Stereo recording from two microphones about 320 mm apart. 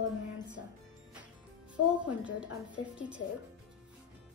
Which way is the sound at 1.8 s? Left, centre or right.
Left.